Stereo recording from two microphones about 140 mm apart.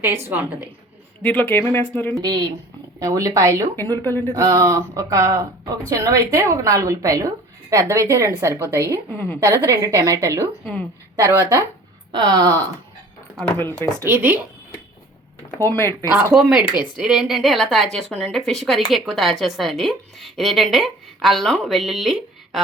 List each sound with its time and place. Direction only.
0.0 s a woman's voice: 15° right (ahead or behind)
1.2 s speech: 10° left (ahead or behind)
2.2 s a woman's voice: 30° right (ahead or behind)
3.8 s speech: 15° left (ahead or behind)
4.4 s a woman's voice: 25° right (ahead or behind)
9.1 s speech: 15° left (ahead or behind)
9.4 s a woman's voice: 20° right (ahead or behind)
13.6 s speech: 15° left (ahead or behind)
14.0 s a woman's voice: 15° right (ahead or behind)
15.6 s speech: 15° left (ahead or behind)
16.3 s a woman's voice: 5° right (ahead or behind)